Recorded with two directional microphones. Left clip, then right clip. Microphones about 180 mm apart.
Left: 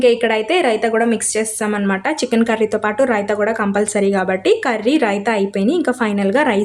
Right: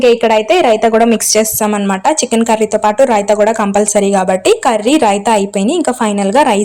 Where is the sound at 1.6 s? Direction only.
15° right (ahead or behind).